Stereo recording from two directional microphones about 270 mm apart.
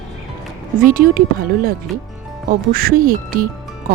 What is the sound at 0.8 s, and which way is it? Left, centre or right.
Speech, right.